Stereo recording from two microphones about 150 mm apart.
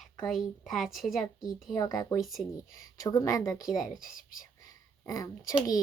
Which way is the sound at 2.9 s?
20° left (ahead or behind).